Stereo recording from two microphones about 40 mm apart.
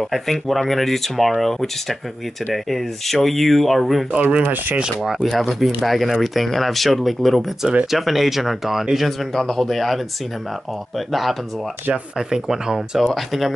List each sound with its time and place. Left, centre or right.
0.0 s speech: centre
4.1 s speech: right
4.4 s speech: right
5.2 s speech: centre
11.1 s speech: centre
12.2 s speech: centre
13.0 s speech: centre